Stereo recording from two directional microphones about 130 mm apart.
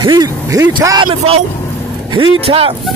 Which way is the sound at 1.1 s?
50° right (ahead or behind).